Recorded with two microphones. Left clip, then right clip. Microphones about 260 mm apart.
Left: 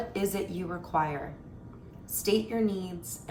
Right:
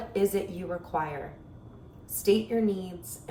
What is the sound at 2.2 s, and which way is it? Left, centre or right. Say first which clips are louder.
Speech: right 3 dB; centre.